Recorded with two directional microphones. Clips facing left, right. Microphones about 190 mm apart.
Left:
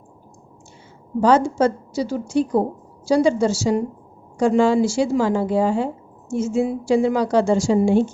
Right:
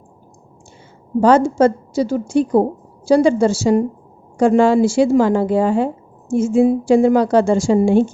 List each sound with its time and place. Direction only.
1.2 s a woman's voice: 50° right (ahead or behind)